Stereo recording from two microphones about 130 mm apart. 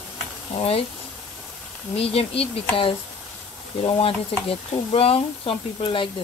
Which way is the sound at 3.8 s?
45° left (ahead or behind).